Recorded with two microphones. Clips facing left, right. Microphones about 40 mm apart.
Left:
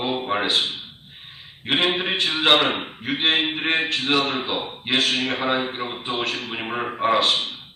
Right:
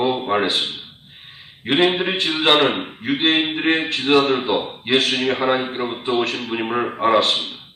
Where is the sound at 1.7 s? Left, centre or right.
Centre.